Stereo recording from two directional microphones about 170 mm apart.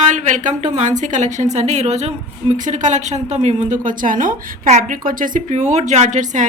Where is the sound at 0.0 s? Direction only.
45° right (ahead or behind).